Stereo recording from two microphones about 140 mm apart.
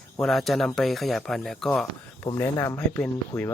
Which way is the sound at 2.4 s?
20° left (ahead or behind).